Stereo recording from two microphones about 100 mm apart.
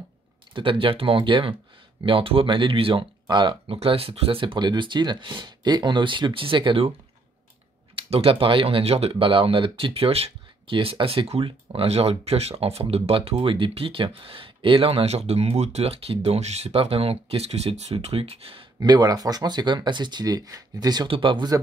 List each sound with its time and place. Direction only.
0.6 s speech: 60° right (ahead or behind)
3.6 s speech: 75° right (ahead or behind)
7.9 s speech: 75° right (ahead or behind)
18.8 s speech: 40° right (ahead or behind)
21.1 s speech: 60° right (ahead or behind)